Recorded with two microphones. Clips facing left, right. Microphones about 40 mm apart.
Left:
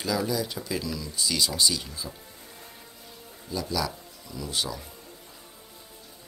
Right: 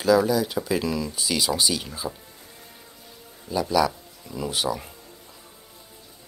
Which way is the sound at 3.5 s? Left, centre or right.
Right.